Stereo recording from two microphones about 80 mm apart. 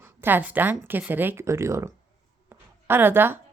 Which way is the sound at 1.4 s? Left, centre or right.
Right.